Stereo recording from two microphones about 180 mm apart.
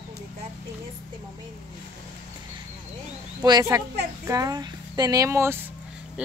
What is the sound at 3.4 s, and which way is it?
Speech, 20° right (ahead or behind).